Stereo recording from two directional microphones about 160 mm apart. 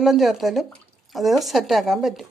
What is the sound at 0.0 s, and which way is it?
Speech, centre (ahead or behind).